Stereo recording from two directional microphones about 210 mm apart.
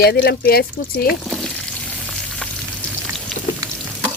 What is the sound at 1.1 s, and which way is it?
Frying, centre (ahead or behind).